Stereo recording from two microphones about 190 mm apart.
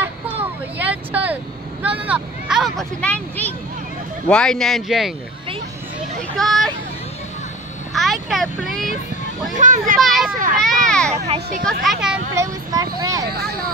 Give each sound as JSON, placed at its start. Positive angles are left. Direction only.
{"t": 0.0, "sound": "vehicle", "side_deg": -10}
{"t": 4.3, "sound": "speech", "side_deg": 5}
{"t": 6.3, "sound": "speech", "side_deg": 0}
{"t": 7.9, "sound": "speech", "side_deg": 0}
{"t": 9.5, "sound": "speech", "side_deg": -40}
{"t": 9.9, "sound": "speech", "side_deg": 0}
{"t": 10.3, "sound": "speech", "side_deg": -45}
{"t": 11.2, "sound": "speech", "side_deg": -35}
{"t": 11.8, "sound": "speech", "side_deg": -5}
{"t": 12.4, "sound": "speech", "side_deg": -20}